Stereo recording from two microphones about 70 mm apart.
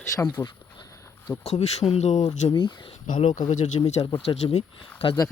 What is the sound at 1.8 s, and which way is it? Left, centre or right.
Speech, left.